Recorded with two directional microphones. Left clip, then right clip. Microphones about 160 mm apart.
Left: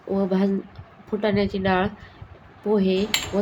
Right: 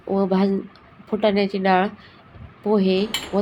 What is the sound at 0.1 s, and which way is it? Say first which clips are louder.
A woman's voice: right 3 dB; 15° right (ahead or behind).